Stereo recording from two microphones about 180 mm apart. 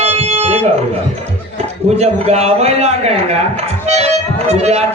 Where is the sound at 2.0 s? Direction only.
35° right (ahead or behind).